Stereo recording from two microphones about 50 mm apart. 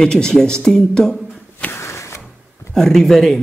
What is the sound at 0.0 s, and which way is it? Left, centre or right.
Speech, centre.